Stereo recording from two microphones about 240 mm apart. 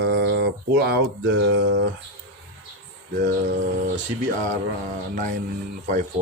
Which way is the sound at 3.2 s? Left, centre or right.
Right.